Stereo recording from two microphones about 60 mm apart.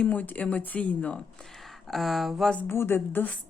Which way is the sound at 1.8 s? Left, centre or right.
Centre.